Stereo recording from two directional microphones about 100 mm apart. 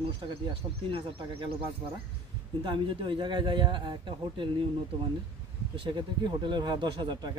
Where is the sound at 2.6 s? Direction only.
55° right (ahead or behind).